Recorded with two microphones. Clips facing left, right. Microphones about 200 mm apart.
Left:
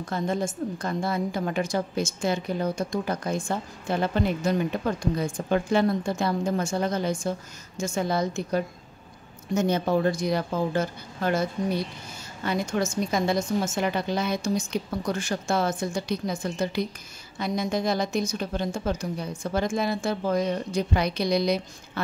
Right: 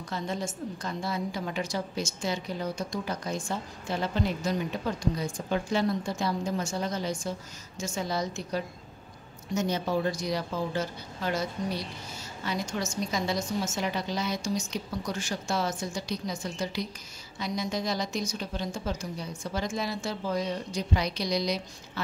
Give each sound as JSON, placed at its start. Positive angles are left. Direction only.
{"t": 0.0, "sound": "a woman's voice", "side_deg": 50}